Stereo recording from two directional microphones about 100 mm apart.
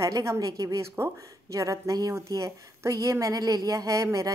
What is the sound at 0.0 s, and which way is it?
Speech, 30° right (ahead or behind).